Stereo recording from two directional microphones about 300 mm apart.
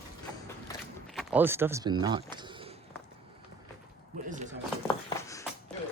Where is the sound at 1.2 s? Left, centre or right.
Centre.